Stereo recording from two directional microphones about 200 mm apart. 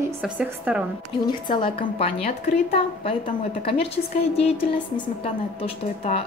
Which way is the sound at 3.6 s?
30° left (ahead or behind).